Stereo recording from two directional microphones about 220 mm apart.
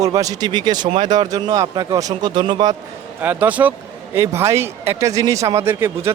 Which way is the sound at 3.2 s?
10° right (ahead or behind).